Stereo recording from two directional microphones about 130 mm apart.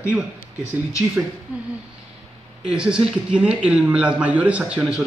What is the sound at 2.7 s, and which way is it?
Speech, 5° right (ahead or behind).